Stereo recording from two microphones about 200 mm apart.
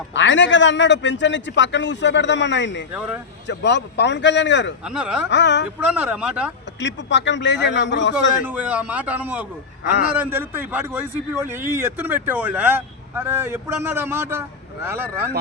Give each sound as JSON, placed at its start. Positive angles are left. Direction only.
{"t": 0.1, "sound": "a man's voice", "side_deg": 65}
{"t": 2.9, "sound": "a man's voice", "side_deg": -5}
{"t": 3.4, "sound": "a man's voice", "side_deg": 60}
{"t": 4.9, "sound": "speech", "side_deg": -5}
{"t": 5.3, "sound": "a man's voice", "side_deg": 60}
{"t": 5.8, "sound": "speech", "side_deg": -5}
{"t": 6.7, "sound": "a man's voice", "side_deg": 65}
{"t": 8.4, "sound": "a man's voice", "side_deg": -5}